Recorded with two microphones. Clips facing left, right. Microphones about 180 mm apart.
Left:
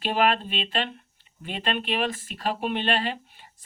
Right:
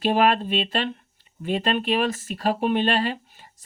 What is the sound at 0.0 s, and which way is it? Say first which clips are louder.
Speech: right 4 dB; 40° right (ahead or behind).